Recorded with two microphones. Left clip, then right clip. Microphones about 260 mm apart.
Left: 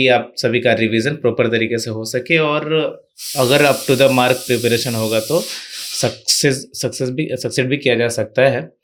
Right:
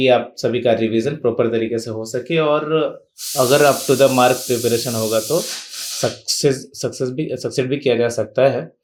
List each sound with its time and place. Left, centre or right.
0.3 s speech: left